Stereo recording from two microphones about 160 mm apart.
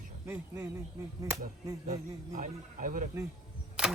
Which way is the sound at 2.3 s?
55° right (ahead or behind).